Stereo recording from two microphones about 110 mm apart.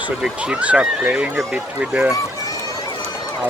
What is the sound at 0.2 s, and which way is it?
Speech, 10° right (ahead or behind).